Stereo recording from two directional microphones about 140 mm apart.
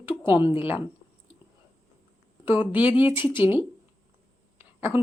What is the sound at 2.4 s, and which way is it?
A woman's voice, 15° right (ahead or behind).